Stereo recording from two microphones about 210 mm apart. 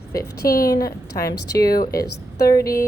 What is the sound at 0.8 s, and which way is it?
A woman's voice, 15° left (ahead or behind).